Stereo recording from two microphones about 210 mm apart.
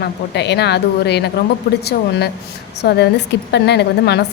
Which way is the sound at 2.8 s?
50° left (ahead or behind).